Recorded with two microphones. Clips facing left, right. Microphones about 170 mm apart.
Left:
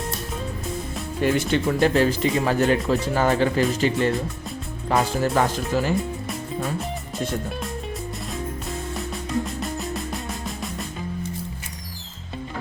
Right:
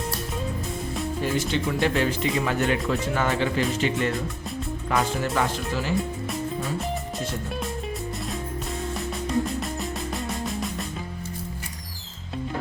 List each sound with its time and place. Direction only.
1.2 s speech: 55° left (ahead or behind)
1.9 s speech: 35° left (ahead or behind)
6.0 s music: centre (ahead or behind)
9.5 s music: centre (ahead or behind)